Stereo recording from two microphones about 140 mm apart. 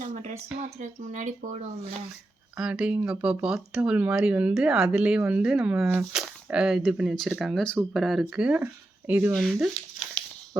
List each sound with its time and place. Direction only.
0.0 s a sound: 60° right (ahead or behind)
0.8 s speech: 60° right (ahead or behind)
2.6 s speech: 5° right (ahead or behind)
9.3 s speech: centre (ahead or behind)